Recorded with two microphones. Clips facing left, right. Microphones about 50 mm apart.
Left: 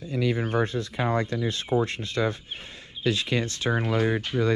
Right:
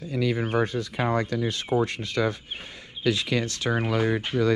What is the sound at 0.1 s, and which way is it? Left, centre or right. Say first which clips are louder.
Speech: even; right.